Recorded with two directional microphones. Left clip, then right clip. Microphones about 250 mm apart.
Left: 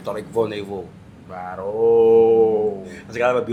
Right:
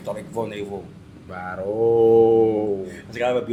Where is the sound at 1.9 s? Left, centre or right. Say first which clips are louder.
Left 2 dB; right.